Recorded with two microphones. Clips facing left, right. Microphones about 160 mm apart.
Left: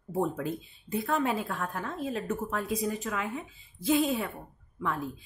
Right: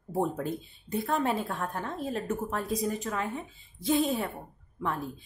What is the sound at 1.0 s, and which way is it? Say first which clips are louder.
Speech: even; 40° right (ahead or behind).